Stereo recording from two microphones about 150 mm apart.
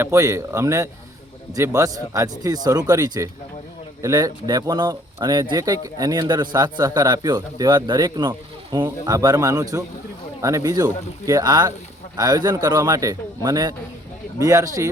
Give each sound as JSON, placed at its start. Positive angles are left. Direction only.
{"t": 0.0, "sound": "speech", "side_deg": -20}